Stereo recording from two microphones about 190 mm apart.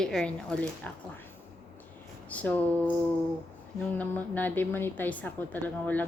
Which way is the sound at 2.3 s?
5° left (ahead or behind).